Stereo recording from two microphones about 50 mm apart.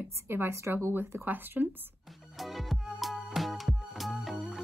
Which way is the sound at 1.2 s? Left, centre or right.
Right.